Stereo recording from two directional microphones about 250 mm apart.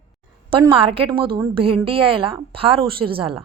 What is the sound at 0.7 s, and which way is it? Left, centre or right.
A woman's voice, right.